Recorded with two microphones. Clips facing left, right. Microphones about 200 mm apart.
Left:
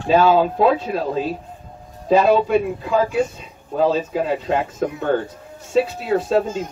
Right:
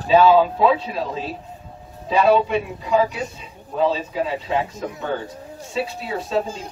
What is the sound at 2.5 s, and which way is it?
Speech, 45° left (ahead or behind).